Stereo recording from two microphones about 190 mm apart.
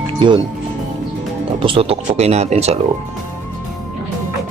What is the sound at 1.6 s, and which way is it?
Speech, 30° right (ahead or behind).